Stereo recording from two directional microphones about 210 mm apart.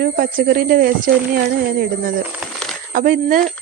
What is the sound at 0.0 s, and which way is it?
Speech, 45° right (ahead or behind).